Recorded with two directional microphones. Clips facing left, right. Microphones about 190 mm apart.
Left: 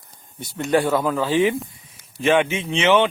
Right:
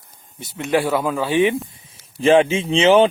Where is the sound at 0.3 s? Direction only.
5° right (ahead or behind).